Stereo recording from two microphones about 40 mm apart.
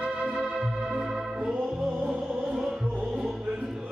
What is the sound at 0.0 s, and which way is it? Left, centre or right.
Organ, centre.